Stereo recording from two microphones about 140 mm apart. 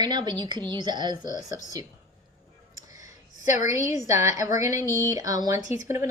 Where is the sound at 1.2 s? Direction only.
65° left (ahead or behind).